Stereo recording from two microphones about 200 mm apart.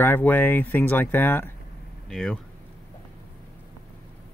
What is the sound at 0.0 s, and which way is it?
Speech, 10° left (ahead or behind).